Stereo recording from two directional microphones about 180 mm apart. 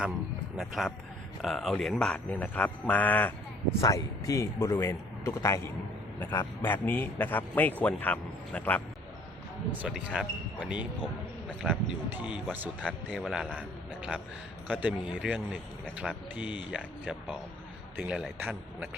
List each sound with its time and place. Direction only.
0.5 s a man's voice: centre (ahead or behind)
9.8 s speech: 5° right (ahead or behind)
11.4 s a sound: 5° left (ahead or behind)
12.1 s a man's voice: 5° right (ahead or behind)